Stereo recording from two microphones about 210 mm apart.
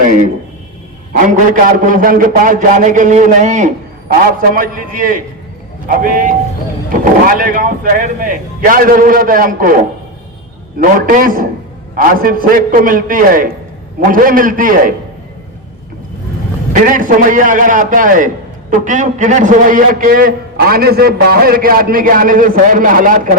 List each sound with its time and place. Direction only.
1.1 s a man's voice: 40° right (ahead or behind)
10.8 s a man's voice: 40° right (ahead or behind)
16.8 s a man's voice: 40° right (ahead or behind)